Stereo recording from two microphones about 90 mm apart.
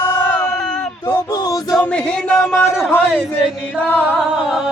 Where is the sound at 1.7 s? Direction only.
10° left (ahead or behind).